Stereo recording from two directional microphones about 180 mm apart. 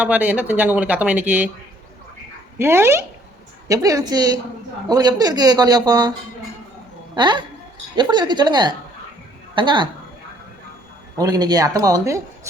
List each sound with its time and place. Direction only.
0.0 s speech: 5° right (ahead or behind)
2.6 s speech: 15° right (ahead or behind)
7.2 s speech: 25° right (ahead or behind)
11.2 s speech: 20° right (ahead or behind)